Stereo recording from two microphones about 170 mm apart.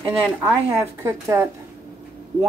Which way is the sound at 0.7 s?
15° right (ahead or behind).